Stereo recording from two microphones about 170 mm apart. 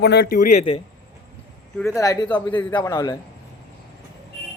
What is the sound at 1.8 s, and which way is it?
A man's voice, 15° left (ahead or behind).